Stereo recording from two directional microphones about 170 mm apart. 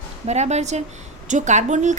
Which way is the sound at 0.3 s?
40° right (ahead or behind).